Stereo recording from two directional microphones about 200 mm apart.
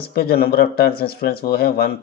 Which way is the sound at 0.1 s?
50° left (ahead or behind).